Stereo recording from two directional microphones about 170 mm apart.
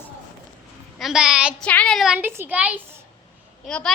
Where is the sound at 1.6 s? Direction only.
5° left (ahead or behind); by 2.8 s 10° right (ahead or behind).